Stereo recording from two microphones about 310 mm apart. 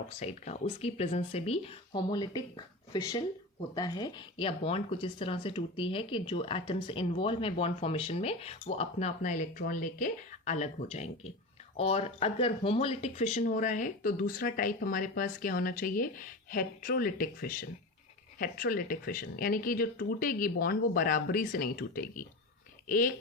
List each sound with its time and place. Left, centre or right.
0.2 s speech: left